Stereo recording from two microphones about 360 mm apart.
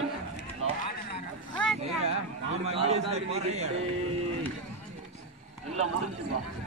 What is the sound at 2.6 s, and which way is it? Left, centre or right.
A man's voice, centre.